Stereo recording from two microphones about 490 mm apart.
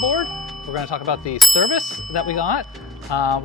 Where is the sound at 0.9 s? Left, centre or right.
Left.